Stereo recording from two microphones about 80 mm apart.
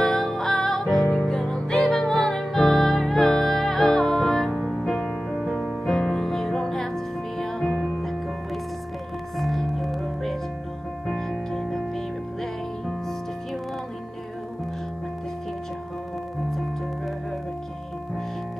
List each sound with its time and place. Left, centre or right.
0.0 s music: centre
5.9 s music: centre
9.4 s music: centre